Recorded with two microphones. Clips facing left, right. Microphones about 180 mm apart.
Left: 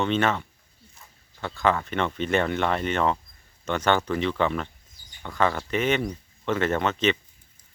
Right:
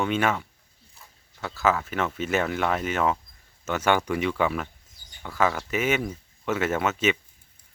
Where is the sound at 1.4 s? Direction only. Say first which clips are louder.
Even; 5° right (ahead or behind).